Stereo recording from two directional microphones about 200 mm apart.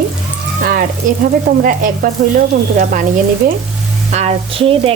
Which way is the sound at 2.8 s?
40° right (ahead or behind).